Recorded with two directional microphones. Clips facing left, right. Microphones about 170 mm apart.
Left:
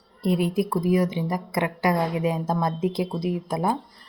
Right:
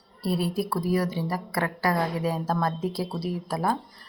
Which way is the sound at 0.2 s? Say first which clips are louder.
Left 4 dB; 20° left (ahead or behind).